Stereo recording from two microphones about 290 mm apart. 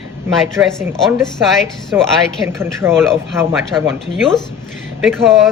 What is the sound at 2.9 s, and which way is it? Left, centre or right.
Speech, centre.